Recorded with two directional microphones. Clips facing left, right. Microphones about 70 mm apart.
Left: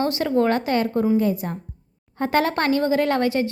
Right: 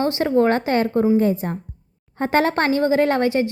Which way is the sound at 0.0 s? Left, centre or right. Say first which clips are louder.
Right 3 dB; right.